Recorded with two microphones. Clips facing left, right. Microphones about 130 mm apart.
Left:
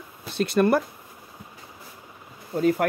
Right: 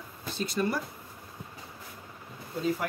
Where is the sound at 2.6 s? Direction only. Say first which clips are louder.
Left 8 dB; 65° left (ahead or behind).